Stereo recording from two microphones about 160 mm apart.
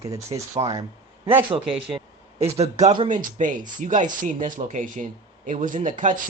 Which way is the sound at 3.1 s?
55° right (ahead or behind).